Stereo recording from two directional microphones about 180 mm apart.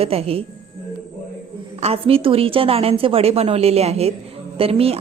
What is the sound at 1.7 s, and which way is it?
A woman's voice, 35° right (ahead or behind).